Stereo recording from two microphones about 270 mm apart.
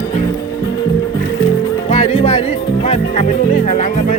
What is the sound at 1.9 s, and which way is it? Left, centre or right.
Music, left.